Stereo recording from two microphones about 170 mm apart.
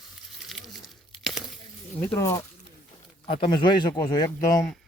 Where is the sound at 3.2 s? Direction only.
30° left (ahead or behind).